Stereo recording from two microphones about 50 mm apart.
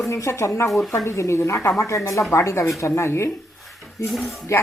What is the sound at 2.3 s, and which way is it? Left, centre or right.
A woman's voice, left.